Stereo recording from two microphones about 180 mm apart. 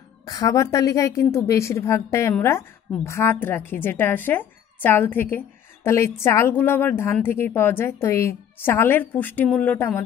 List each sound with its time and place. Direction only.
0.2 s speech: 20° left (ahead or behind)